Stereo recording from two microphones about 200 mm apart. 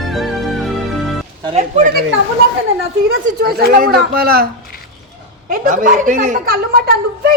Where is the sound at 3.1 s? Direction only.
50° right (ahead or behind).